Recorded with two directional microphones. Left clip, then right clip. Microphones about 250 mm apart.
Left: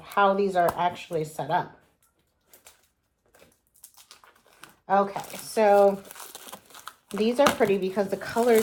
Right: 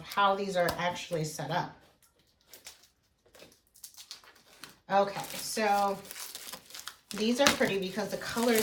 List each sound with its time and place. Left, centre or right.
0.1 s speech: centre
2.5 s bird: centre
5.5 s speech: left